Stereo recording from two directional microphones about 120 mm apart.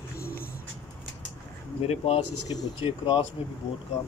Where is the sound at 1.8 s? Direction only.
60° left (ahead or behind).